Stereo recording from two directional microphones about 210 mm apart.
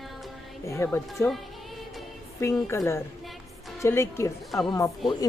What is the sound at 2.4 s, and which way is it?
Speech, 15° left (ahead or behind).